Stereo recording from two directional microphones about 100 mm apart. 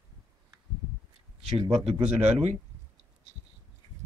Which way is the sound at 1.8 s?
80° right.